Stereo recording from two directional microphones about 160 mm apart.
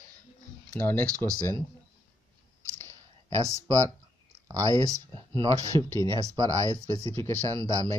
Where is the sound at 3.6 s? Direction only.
20° right (ahead or behind).